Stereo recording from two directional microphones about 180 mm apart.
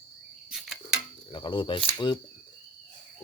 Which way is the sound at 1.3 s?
25° left (ahead or behind).